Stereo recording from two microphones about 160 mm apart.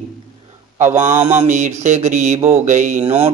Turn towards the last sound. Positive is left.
turn(degrees=-40)  # may be behind; listen again after turning